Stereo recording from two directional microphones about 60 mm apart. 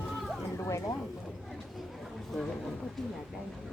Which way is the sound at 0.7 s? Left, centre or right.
Left.